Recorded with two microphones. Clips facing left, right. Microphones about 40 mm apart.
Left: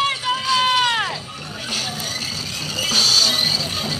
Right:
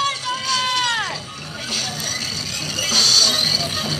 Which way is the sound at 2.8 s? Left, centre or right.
Centre.